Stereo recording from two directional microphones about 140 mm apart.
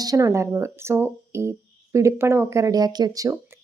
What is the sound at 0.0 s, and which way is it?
Speech, 25° right (ahead or behind).